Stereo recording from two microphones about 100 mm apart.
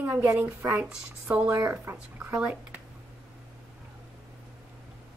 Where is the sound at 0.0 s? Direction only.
20° right (ahead or behind).